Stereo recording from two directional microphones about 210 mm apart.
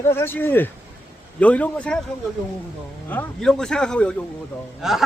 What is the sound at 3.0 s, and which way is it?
Speech, 5° left (ahead or behind).